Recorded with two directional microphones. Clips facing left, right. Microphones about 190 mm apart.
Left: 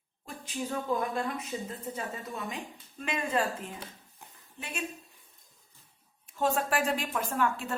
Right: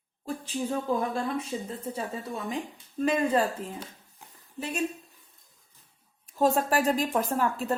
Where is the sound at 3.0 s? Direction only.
35° right (ahead or behind).